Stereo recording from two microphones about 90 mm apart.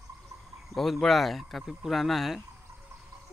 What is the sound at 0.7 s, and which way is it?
Speech, centre (ahead or behind).